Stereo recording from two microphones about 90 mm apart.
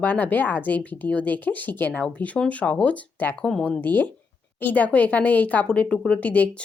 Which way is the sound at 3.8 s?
20° left (ahead or behind).